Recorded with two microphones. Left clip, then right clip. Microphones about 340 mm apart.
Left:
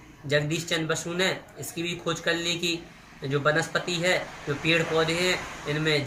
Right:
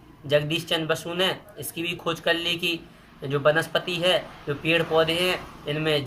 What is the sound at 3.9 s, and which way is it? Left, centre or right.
Speech, right.